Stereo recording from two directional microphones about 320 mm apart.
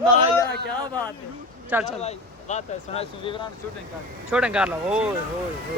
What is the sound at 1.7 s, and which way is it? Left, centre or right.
Speech, centre.